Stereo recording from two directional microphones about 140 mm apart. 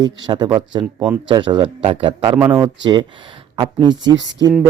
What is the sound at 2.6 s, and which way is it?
A man's voice, 30° right (ahead or behind).